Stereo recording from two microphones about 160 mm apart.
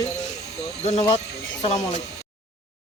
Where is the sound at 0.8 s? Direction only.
45° left (ahead or behind).